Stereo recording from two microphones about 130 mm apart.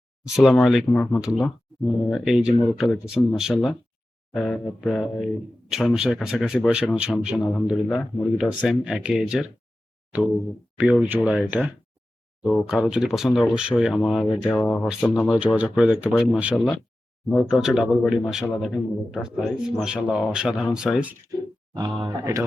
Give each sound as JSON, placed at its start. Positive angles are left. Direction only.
{"t": 0.3, "sound": "a man's voice", "side_deg": -5}
{"t": 0.9, "sound": "speech", "side_deg": 10}
{"t": 1.2, "sound": "a man's voice", "side_deg": -5}
{"t": 10.8, "sound": "a man's voice", "side_deg": -10}
{"t": 21.8, "sound": "speech", "side_deg": -35}